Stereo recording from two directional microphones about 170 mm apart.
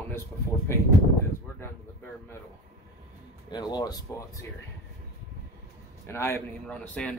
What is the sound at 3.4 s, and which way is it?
Speech, 25° left (ahead or behind).